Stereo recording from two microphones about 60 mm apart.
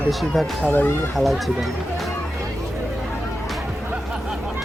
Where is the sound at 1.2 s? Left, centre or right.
Centre.